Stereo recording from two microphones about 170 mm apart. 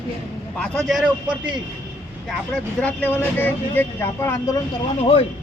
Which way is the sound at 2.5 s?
10° left (ahead or behind).